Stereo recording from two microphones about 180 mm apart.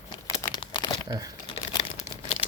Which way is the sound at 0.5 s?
25° left (ahead or behind).